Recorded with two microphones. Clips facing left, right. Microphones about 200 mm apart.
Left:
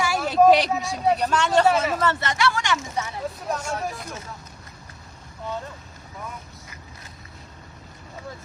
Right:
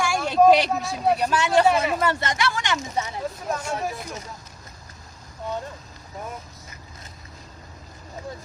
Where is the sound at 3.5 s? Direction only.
Centre (ahead or behind).